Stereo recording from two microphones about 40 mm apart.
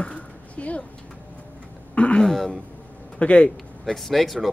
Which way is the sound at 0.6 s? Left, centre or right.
Left.